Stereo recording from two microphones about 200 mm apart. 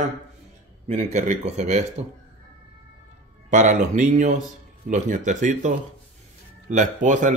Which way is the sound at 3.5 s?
40° right (ahead or behind).